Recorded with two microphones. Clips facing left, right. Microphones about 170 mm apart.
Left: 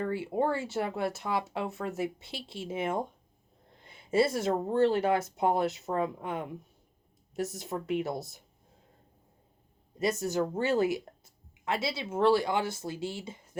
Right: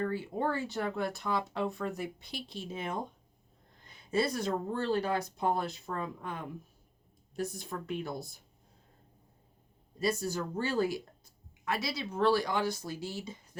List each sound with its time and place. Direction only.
0.0 s speech: 25° left (ahead or behind)
7.9 s speech: 25° left (ahead or behind)
10.0 s speech: 20° left (ahead or behind)